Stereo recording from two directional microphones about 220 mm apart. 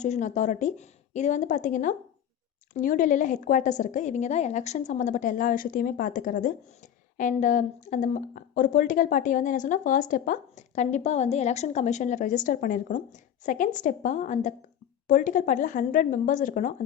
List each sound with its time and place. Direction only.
0.0 s speech: 35° left (ahead or behind)